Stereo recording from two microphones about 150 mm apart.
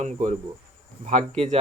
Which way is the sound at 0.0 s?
55° right (ahead or behind).